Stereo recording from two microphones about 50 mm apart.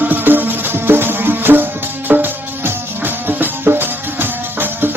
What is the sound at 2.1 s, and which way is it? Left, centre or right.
Music, right.